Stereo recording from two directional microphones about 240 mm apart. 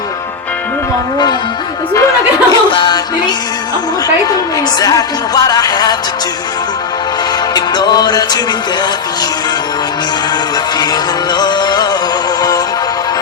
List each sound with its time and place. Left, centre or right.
2.0 s music: centre
4.8 s music: centre
7.5 s music: centre
10.8 s music: centre